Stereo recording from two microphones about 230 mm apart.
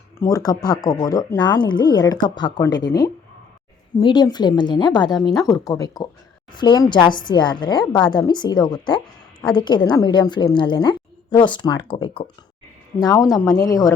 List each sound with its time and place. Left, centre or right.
0.2 s a woman's voice: centre